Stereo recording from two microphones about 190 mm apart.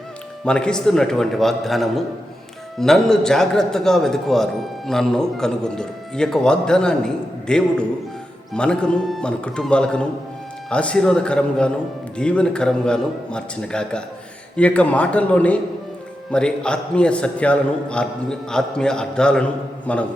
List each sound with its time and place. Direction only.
0.4 s a man's voice: 5° left (ahead or behind)